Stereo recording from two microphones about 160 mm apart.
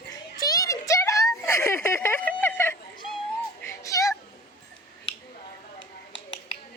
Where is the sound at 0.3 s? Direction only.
25° left (ahead or behind).